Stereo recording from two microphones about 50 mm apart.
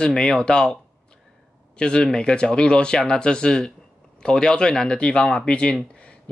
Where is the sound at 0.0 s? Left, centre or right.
Centre.